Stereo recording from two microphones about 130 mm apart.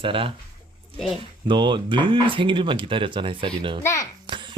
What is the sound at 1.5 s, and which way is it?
Speech, 35° right (ahead or behind).